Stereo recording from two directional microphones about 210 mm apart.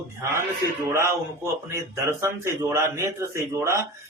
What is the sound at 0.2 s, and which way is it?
A man's voice, 15° right (ahead or behind).